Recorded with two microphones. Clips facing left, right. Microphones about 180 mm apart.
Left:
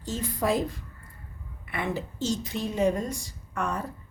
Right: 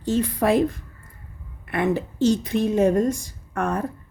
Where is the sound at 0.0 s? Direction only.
60° right (ahead or behind).